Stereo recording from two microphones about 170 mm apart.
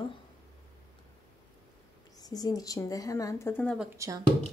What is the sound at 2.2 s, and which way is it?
Speech, 25° left (ahead or behind).